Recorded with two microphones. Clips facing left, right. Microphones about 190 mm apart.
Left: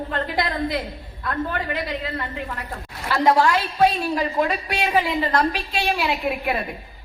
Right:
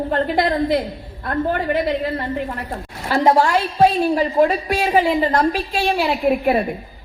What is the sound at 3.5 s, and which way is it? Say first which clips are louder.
A woman's voice: right 3 dB; 40° right (ahead or behind).